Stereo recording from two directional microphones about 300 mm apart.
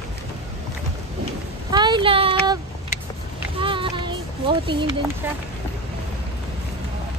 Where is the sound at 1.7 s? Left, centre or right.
Centre.